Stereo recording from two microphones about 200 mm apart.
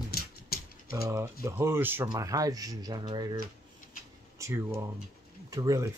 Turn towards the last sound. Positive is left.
turn(degrees=-15)  # may be behind; listen again after turning